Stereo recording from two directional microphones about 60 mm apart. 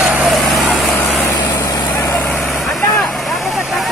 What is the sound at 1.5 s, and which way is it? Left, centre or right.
Vehicle, left.